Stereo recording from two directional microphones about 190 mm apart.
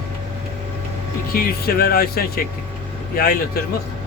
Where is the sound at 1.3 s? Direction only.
50° left (ahead or behind).